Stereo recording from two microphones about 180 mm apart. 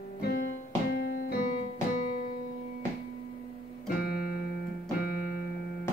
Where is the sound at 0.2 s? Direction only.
60° left (ahead or behind).